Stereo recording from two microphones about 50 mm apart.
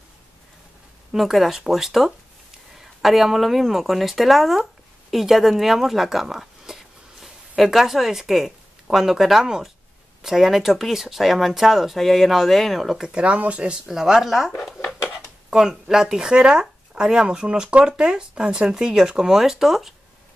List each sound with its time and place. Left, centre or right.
1.1 s speech: centre
13.1 s speech: right
13.8 s speech: centre
15.5 s speech: centre